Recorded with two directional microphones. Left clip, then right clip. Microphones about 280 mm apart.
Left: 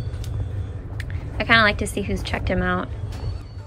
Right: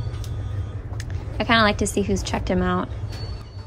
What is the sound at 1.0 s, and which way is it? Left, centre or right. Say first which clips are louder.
A woman's voice: even; centre.